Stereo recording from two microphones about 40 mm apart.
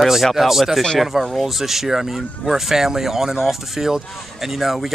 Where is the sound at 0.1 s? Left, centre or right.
Centre.